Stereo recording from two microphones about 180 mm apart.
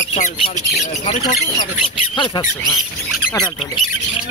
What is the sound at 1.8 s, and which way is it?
Speech, 25° left (ahead or behind).